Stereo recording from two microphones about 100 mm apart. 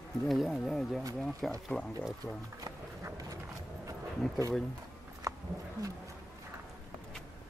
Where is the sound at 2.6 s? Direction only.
35° right (ahead or behind).